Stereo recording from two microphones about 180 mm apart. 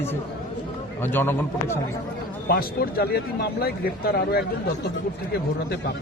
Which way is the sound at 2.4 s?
60° left (ahead or behind).